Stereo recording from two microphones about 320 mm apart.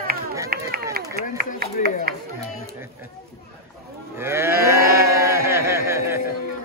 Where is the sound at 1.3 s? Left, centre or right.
Right.